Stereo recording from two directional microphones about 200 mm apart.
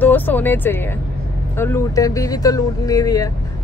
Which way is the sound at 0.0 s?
10° left (ahead or behind).